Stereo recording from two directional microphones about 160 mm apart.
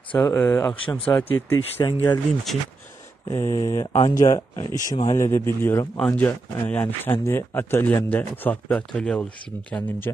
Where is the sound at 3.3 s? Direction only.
15° left (ahead or behind).